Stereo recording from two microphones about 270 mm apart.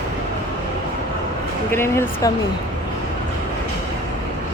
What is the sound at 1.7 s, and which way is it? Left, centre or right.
Speech, centre.